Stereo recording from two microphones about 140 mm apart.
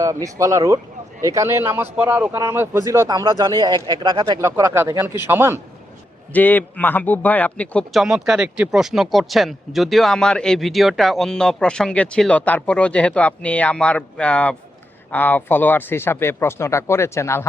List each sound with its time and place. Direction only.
0.0 s a man's voice: 25° right (ahead or behind)
4.4 s a man's voice: 20° right (ahead or behind)
6.3 s speech: 10° left (ahead or behind)
8.0 s speech: 5° right (ahead or behind); by 17.5 s 20° left (ahead or behind)